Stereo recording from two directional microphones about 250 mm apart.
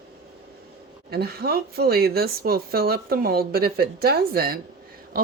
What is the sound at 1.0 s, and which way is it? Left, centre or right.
Speech, right.